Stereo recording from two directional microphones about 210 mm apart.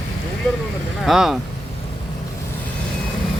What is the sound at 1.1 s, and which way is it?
Speech, centre (ahead or behind).